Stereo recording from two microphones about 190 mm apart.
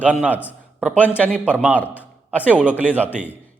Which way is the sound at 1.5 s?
10° right (ahead or behind).